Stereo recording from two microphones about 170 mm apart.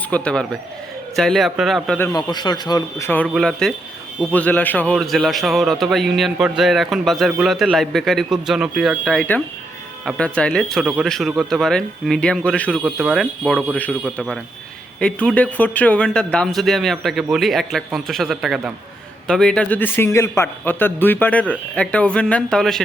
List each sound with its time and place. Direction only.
0.1 s speech: 5° left (ahead or behind)
2.1 s speech: 25° left (ahead or behind)
3.2 s a man's voice: centre (ahead or behind)